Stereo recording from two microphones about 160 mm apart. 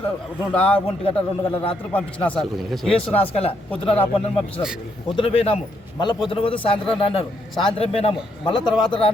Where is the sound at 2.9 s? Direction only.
40° left (ahead or behind).